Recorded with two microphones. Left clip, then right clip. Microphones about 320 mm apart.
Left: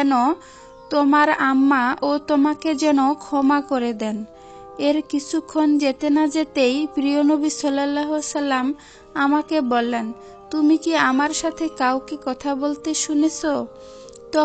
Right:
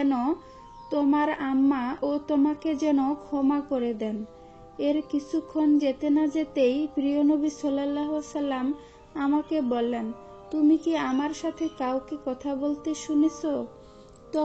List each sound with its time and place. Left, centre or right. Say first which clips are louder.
0.0 s speech: left 8 dB; left